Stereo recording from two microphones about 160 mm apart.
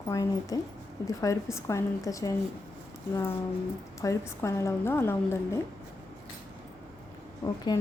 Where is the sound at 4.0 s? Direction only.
20° left (ahead or behind).